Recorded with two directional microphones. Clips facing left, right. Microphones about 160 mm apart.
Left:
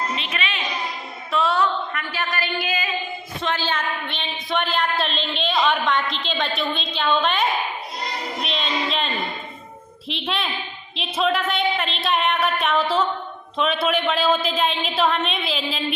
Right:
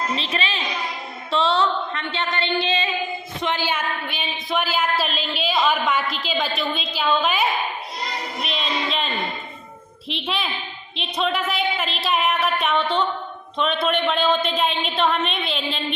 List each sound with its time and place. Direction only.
0.2 s a woman's voice: 30° right (ahead or behind)
3.4 s a woman's voice: 15° right (ahead or behind)